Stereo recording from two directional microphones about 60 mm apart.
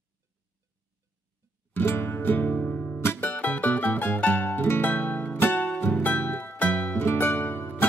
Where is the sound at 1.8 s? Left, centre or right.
Left.